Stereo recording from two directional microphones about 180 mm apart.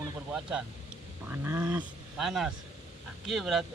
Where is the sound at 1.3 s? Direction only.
10° right (ahead or behind).